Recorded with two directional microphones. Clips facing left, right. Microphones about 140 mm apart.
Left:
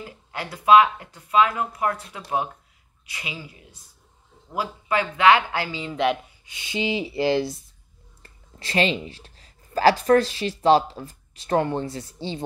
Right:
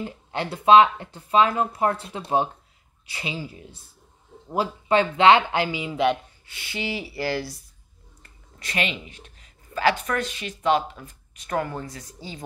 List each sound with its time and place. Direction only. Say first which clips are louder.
0.0 s speech: right 5 dB; 25° right (ahead or behind)
6.4 s speech: left 5 dB; 20° left (ahead or behind)